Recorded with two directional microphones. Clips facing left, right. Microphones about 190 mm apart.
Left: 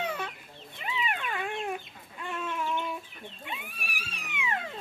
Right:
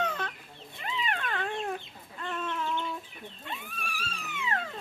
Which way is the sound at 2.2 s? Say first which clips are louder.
Even; 10° left (ahead or behind).